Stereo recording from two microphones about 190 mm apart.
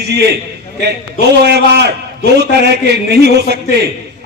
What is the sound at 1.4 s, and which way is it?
A man's voice, 60° right (ahead or behind).